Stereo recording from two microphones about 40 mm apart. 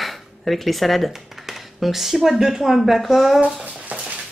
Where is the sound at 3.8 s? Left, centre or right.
Right.